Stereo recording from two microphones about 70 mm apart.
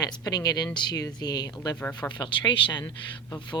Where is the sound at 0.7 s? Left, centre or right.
Left.